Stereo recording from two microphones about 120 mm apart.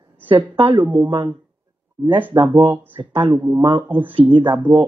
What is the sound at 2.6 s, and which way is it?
Speech, 15° right (ahead or behind).